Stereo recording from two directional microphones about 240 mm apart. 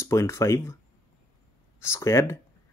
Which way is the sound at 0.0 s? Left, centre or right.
Centre.